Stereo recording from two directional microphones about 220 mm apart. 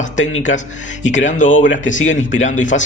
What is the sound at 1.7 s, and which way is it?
Speech, 60° left (ahead or behind).